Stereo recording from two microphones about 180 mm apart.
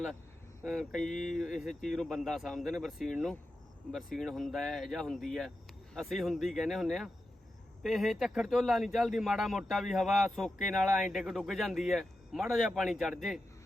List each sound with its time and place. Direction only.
0.6 s speech: centre (ahead or behind)
1.1 s speech: 45° left (ahead or behind)
1.4 s speech: centre (ahead or behind)